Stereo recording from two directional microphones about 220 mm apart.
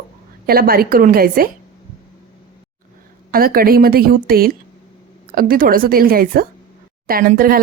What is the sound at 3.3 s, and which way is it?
Speech, 40° right (ahead or behind).